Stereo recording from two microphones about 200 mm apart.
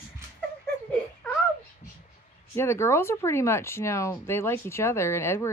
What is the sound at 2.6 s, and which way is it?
Speech, 15° left (ahead or behind).